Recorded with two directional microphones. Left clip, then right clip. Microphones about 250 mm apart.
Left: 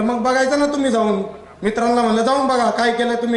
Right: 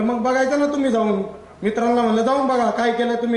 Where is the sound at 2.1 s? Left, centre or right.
Centre.